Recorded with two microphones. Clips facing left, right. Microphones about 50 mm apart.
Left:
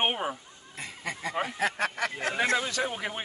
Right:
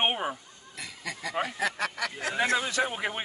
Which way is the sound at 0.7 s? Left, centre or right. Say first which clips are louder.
Left 2 dB; left.